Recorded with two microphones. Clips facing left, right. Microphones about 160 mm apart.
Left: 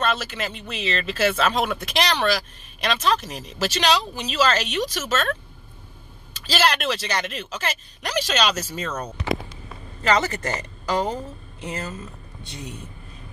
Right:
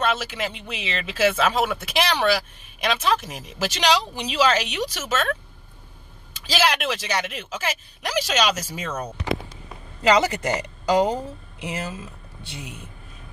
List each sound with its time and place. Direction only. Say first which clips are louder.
0.0 s speech: right 1 dB; 10° right (ahead or behind)